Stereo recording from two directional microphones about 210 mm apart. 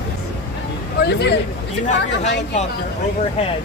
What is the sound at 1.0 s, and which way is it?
Speech, 50° left (ahead or behind).